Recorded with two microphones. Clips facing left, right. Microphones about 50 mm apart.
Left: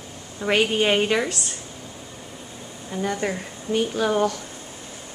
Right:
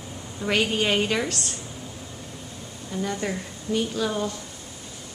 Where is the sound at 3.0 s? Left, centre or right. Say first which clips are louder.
Left 4 dB; left.